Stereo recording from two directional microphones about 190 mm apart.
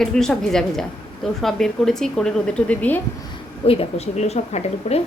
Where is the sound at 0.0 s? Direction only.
Centre (ahead or behind).